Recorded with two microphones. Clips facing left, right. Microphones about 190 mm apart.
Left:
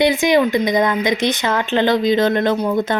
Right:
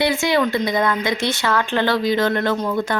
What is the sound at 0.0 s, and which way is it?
Speech, 20° left (ahead or behind).